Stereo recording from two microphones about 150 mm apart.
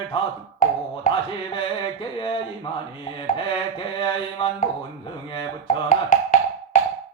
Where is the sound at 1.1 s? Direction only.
60° left (ahead or behind).